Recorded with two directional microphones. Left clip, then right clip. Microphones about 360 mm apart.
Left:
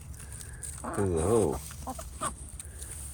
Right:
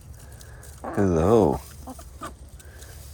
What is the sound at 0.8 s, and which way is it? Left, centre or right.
Speech, centre.